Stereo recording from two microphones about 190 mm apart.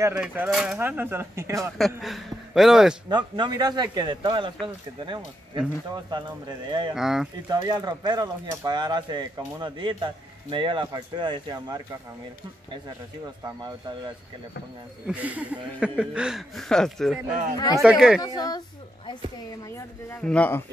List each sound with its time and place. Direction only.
0.0 s speech: 10° right (ahead or behind)
2.0 s speech: centre (ahead or behind)
3.1 s speech: 25° right (ahead or behind)
7.0 s speech: centre (ahead or behind)
7.4 s speech: 20° right (ahead or behind)
13.6 s speech: 25° right (ahead or behind)
15.0 s speech: 10° right (ahead or behind)
17.3 s speech: 45° right (ahead or behind)
17.8 s speech: 5° right (ahead or behind)
18.2 s a woman's voice: 20° left (ahead or behind)
20.2 s a man's voice: 5° left (ahead or behind)